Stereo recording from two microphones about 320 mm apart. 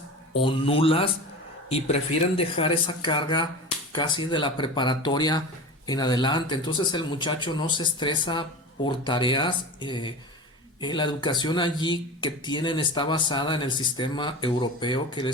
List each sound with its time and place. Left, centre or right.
0.3 s speech: centre
2.4 s speech: centre